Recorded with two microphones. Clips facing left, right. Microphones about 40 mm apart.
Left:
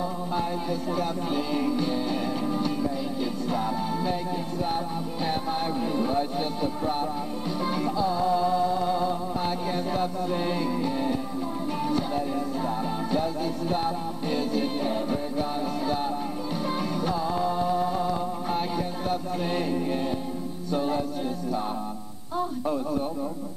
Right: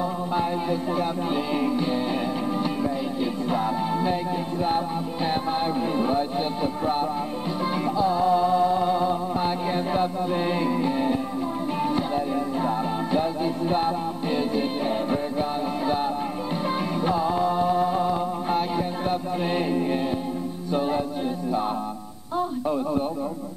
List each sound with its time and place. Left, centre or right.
0.4 s music: centre
3.5 s music: right
12.6 s music: right
17.0 s music: right